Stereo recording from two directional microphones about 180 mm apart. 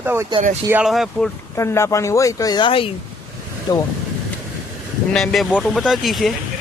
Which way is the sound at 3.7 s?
20° left (ahead or behind).